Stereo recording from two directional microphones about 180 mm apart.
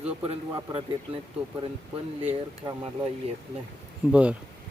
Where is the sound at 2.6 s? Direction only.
25° right (ahead or behind).